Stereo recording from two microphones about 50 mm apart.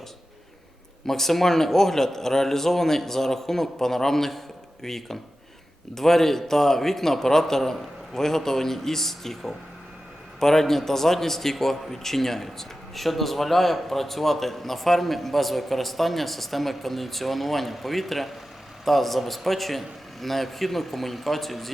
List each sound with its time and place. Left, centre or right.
1.0 s a man's voice: centre